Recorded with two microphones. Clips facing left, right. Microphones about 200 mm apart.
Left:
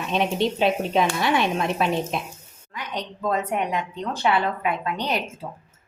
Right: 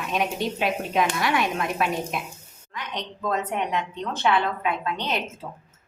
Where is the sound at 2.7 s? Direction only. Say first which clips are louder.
Left 2 dB; 10° left (ahead or behind).